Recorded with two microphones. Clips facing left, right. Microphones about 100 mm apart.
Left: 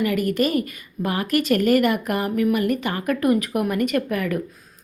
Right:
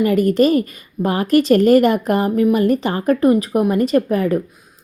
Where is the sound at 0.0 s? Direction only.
35° right (ahead or behind).